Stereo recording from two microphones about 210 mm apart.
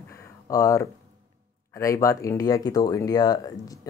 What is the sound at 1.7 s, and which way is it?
Speech, 15° left (ahead or behind).